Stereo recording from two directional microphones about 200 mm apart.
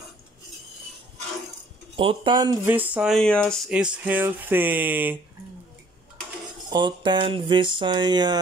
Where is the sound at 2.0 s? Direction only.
25° right (ahead or behind); by 5.1 s 10° right (ahead or behind).